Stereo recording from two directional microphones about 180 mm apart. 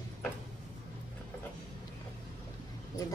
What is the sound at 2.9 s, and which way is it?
Speech, 20° left (ahead or behind).